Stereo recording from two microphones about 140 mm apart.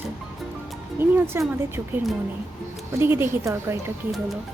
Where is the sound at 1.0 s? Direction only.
15° right (ahead or behind).